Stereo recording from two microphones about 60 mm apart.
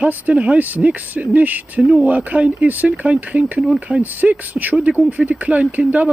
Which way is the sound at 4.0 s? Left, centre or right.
Right.